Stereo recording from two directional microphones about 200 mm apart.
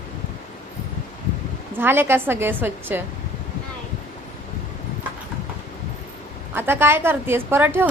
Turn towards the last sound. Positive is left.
turn(degrees=-10)  # may be behind; listen again after turning